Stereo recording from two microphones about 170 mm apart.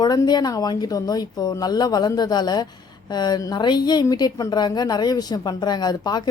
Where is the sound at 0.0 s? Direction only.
25° left (ahead or behind).